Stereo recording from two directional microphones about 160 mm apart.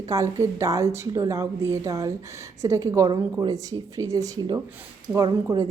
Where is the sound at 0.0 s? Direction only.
20° right (ahead or behind).